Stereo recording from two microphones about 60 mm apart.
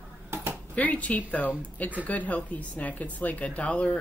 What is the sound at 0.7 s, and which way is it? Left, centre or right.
Speech, left.